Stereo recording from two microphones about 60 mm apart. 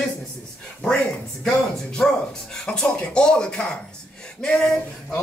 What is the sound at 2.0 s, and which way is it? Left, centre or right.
Speech, centre.